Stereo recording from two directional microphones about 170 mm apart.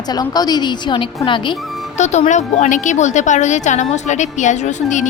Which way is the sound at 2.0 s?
45° left (ahead or behind).